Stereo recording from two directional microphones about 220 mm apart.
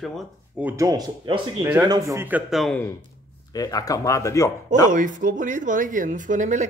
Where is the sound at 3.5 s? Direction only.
15° left (ahead or behind).